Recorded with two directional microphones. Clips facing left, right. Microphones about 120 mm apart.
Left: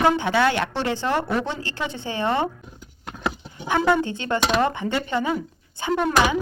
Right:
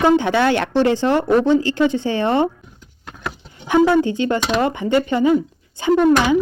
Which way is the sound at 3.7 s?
15° right (ahead or behind).